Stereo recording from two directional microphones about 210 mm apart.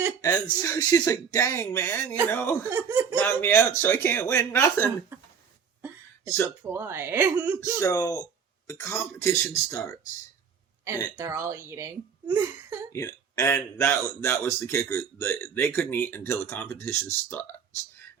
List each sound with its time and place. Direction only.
0.2 s speech: 15° left (ahead or behind)
2.6 s speech: 10° right (ahead or behind)
3.2 s speech: 10° left (ahead or behind)
6.6 s speech: 10° right (ahead or behind)
7.8 s speech: 15° left (ahead or behind)
11.2 s speech: 10° right (ahead or behind)
12.9 s speech: 15° left (ahead or behind)